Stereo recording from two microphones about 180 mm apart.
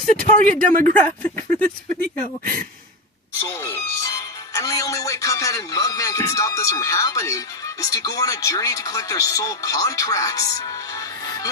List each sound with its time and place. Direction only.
0.0 s speech: 5° left (ahead or behind)
0.7 s speech: 50° right (ahead or behind)
0.9 s speech: 10° left (ahead or behind)
3.5 s speech: 15° left (ahead or behind)